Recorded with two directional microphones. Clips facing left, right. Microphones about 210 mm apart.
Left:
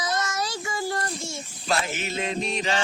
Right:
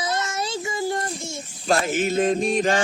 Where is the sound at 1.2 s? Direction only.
45° right (ahead or behind).